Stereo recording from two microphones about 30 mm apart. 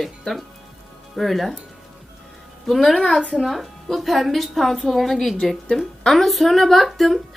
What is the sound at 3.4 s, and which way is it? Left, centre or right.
A woman's voice, centre.